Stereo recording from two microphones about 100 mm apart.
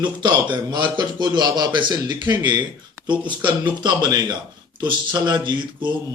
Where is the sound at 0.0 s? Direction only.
50° right (ahead or behind).